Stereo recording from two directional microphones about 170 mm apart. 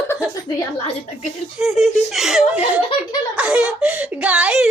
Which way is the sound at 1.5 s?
Centre (ahead or behind).